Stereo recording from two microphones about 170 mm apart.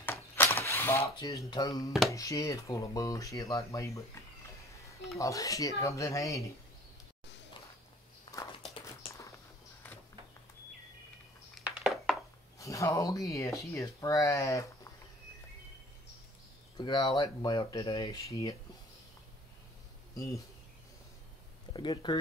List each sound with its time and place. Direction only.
0.0 s a sound: 15° left (ahead or behind)
1.5 s speech: 20° left (ahead or behind)
1.9 s speech: centre (ahead or behind)
2.1 s speech: 20° left (ahead or behind)
5.2 s speech: 20° left (ahead or behind)
9.8 s a sound: 10° left (ahead or behind)
11.6 s a sound: centre (ahead or behind)
12.5 s speech: 20° left (ahead or behind)
16.7 s speech: 25° left (ahead or behind)
21.7 s speech: 25° left (ahead or behind)